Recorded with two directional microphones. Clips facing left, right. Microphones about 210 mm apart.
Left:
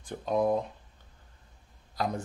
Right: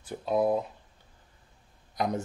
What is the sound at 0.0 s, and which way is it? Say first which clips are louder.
Speech: right 1 dB; 5° right (ahead or behind).